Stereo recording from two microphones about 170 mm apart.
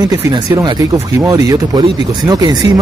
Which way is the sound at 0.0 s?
20° right (ahead or behind).